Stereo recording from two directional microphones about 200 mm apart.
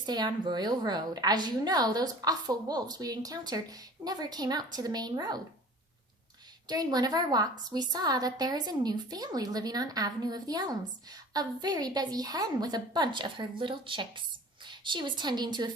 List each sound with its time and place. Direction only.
0.0 s a woman's voice: 20° right (ahead or behind)
6.7 s a woman's voice: 20° right (ahead or behind)